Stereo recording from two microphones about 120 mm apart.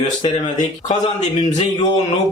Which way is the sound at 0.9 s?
70° left (ahead or behind).